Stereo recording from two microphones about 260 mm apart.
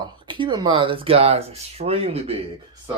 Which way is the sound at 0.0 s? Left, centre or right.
Centre.